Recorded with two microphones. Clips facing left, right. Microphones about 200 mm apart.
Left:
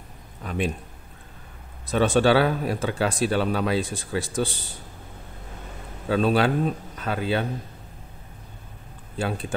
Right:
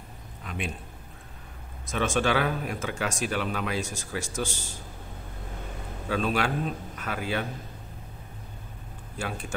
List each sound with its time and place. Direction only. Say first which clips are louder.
0.4 s a man's voice: left 8 dB; 40° left (ahead or behind)
1.9 s speech: left 7 dB; 35° left (ahead or behind)
6.0 s speech: left 6 dB; 30° left (ahead or behind)
9.1 s speech: left 6 dB; 30° left (ahead or behind)